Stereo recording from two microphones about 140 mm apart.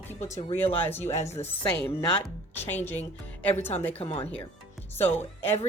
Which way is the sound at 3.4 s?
15° left (ahead or behind).